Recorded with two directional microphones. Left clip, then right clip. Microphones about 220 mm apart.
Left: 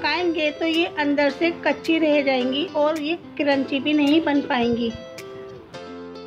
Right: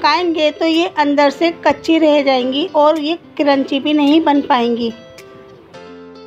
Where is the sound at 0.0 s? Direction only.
20° right (ahead or behind).